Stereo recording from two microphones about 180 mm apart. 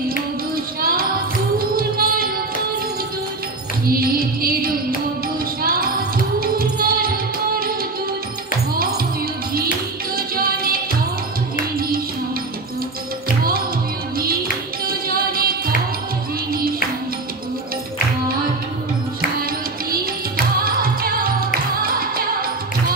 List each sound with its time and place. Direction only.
0.7 s music: 55° right (ahead or behind)
3.8 s music: 55° right (ahead or behind)
10.1 s music: 55° right (ahead or behind)
14.9 s music: 55° right (ahead or behind)
20.6 s music: 55° right (ahead or behind)